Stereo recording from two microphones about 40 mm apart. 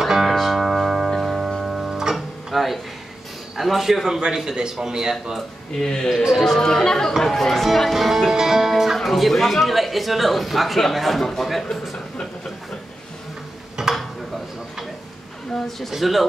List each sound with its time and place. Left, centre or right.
0.0 s music: centre
0.6 s music: centre
3.5 s speech: centre
5.7 s speech: centre
13.8 s a sound: centre
15.5 s speech: centre